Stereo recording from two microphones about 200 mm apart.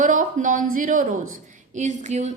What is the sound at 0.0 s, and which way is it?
A woman's voice, 40° right (ahead or behind).